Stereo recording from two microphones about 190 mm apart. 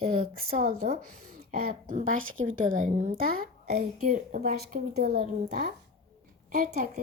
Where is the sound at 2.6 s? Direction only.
45° right (ahead or behind).